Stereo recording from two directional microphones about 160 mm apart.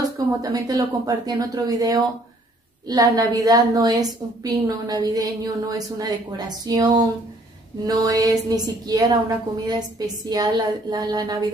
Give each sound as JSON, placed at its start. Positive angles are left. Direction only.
{"t": 0.4, "sound": "a woman's voice", "side_deg": -25}